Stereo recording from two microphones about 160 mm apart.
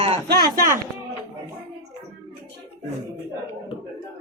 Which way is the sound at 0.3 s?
70° right (ahead or behind).